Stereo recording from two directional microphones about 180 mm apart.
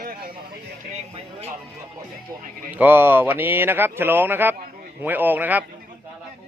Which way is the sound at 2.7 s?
10° right (ahead or behind).